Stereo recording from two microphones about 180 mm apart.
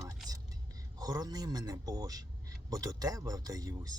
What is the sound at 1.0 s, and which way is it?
A man's voice, 20° right (ahead or behind).